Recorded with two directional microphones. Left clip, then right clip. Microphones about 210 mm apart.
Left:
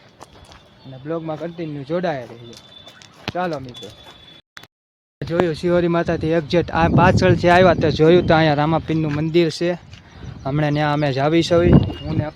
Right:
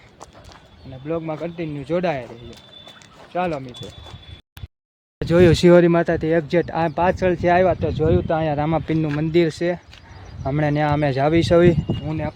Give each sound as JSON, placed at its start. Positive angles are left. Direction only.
{"t": 1.0, "sound": "a man's voice", "side_deg": -5}
{"t": 5.2, "sound": "speech", "side_deg": -55}
{"t": 5.8, "sound": "speech", "side_deg": -10}
{"t": 6.1, "sound": "speech", "side_deg": 0}
{"t": 8.5, "sound": "a man's voice", "side_deg": 10}
{"t": 12.0, "sound": "speech", "side_deg": -15}